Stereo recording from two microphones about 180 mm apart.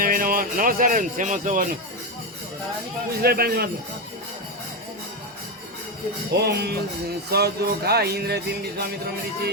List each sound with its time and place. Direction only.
0.0 s speech: 50° right (ahead or behind)
3.2 s music: 60° right (ahead or behind)
6.3 s music: 65° right (ahead or behind)